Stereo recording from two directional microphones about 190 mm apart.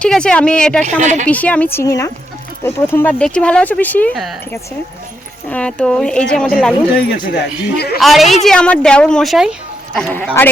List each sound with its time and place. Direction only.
0.0 s a woman's voice: 5° left (ahead or behind)
0.9 s a woman's voice: 40° right (ahead or behind)
1.3 s speech: 5° left (ahead or behind)
5.5 s a woman's voice: 5° left (ahead or behind)
6.9 s speech: 60° left (ahead or behind)
7.9 s a woman's voice: centre (ahead or behind)